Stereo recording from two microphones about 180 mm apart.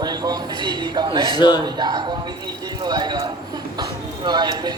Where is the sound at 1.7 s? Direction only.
25° right (ahead or behind).